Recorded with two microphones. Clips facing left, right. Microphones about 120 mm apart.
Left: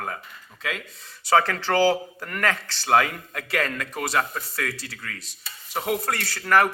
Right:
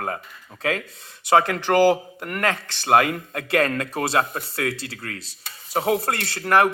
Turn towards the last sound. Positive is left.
turn(degrees=-20)  # may be behind; listen again after turning